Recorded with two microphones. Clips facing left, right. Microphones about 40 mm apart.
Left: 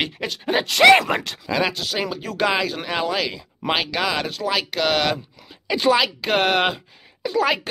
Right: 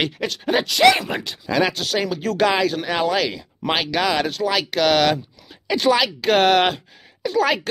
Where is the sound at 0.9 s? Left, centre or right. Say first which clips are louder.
Left 7 dB; left.